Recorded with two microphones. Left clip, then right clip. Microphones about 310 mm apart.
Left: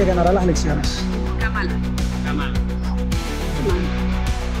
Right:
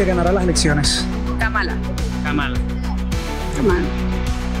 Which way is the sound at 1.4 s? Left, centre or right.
Right.